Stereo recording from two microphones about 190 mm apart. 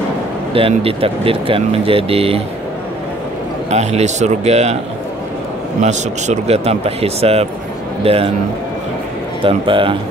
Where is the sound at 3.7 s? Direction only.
35° right (ahead or behind).